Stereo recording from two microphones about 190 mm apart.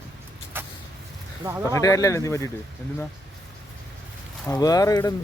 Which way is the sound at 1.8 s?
15° left (ahead or behind).